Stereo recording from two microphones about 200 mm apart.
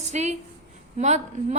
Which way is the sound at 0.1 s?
35° right (ahead or behind).